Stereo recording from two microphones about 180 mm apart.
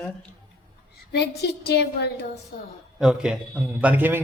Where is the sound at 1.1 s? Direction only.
65° left (ahead or behind).